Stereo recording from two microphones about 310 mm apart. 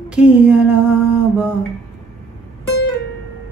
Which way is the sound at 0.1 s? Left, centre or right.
Centre.